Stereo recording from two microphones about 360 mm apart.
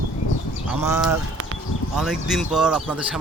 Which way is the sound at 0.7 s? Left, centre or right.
Centre.